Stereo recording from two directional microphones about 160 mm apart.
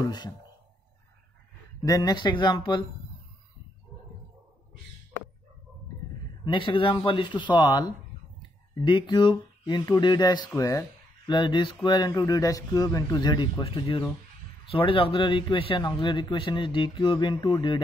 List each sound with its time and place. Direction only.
0.0 s a sound: 25° left (ahead or behind)
1.8 s speech: 20° left (ahead or behind)
6.4 s speech: 30° left (ahead or behind)